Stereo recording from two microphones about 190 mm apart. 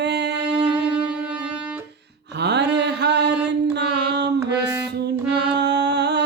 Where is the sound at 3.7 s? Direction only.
65° right (ahead or behind).